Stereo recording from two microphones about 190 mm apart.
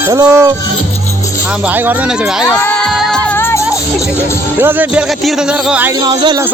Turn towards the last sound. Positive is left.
turn(degrees=-5)  # may be behind; listen again after turning